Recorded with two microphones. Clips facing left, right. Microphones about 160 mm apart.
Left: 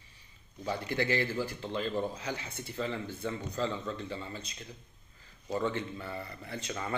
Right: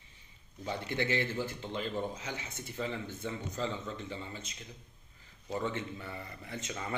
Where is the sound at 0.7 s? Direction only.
20° right (ahead or behind).